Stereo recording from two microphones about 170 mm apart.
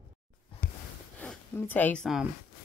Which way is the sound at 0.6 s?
55° left (ahead or behind).